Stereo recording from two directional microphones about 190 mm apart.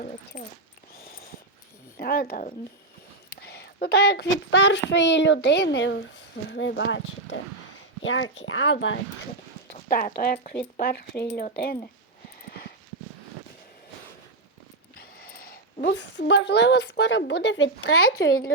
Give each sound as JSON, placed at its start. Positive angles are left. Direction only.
{"t": 0.3, "sound": "speech", "side_deg": 45}
{"t": 2.0, "sound": "a child's voice", "side_deg": 55}
{"t": 8.0, "sound": "speech", "side_deg": 90}
{"t": 9.9, "sound": "speech", "side_deg": 50}
{"t": 12.5, "sound": "horse", "side_deg": 55}
{"t": 15.2, "sound": "speech", "side_deg": 50}